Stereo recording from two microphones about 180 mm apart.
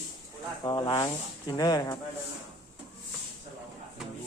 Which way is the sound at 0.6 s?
25° left (ahead or behind).